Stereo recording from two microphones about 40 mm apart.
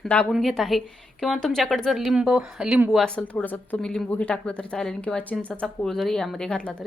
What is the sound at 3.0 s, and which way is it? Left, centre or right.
Speech, centre.